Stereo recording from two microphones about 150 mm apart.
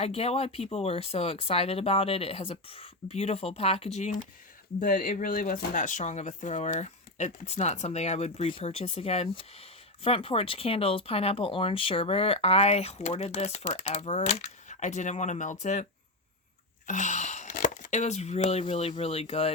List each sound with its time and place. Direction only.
0.0 s speech: 40° left (ahead or behind)
4.8 s speech: 65° left (ahead or behind); by 15.9 s 50° left (ahead or behind)
16.8 s a sound: 55° left (ahead or behind)
18.6 s speech: 40° left (ahead or behind)